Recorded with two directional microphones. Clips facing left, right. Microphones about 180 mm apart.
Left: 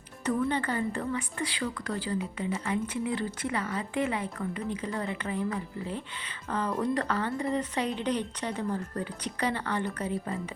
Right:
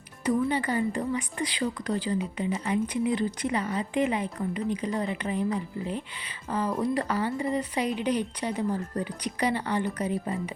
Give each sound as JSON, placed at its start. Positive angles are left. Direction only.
{"t": 0.3, "sound": "a woman's voice", "side_deg": -10}